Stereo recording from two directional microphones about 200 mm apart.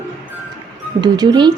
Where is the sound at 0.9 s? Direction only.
20° right (ahead or behind).